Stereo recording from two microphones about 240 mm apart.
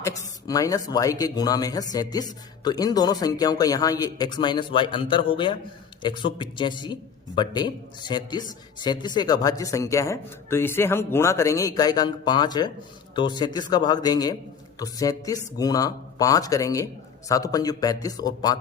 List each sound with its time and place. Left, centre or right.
0.0 s speech: centre